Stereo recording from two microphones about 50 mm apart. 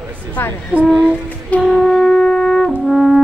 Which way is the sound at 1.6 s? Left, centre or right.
Centre.